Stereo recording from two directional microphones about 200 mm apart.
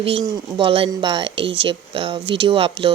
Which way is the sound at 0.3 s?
25° right (ahead or behind).